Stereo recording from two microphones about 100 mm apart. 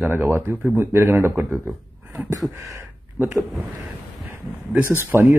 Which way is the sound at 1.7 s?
Centre (ahead or behind).